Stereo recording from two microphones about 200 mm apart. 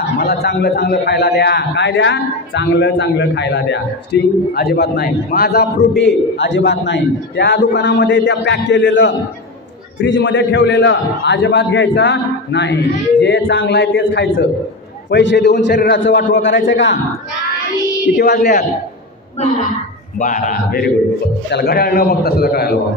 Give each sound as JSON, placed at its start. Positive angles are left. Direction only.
{"t": 0.2, "sound": "a man's voice", "side_deg": 55}
{"t": 18.1, "sound": "a man's voice", "side_deg": 50}
{"t": 20.2, "sound": "a man's voice", "side_deg": 40}